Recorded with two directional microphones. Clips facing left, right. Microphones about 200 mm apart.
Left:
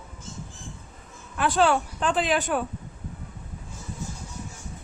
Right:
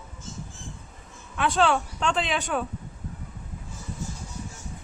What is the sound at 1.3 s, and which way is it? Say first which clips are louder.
Speech: left 1 dB; centre (ahead or behind).